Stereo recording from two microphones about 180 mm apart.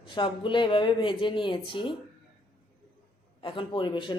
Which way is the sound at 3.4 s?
25° left (ahead or behind).